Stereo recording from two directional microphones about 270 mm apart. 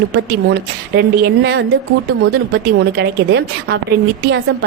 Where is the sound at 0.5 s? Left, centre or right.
Right.